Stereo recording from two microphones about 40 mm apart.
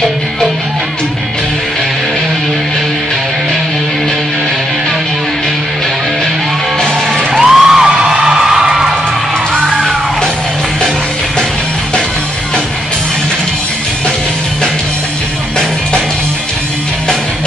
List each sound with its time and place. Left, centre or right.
7.3 s music: centre
7.7 s music: right
8.3 s music: centre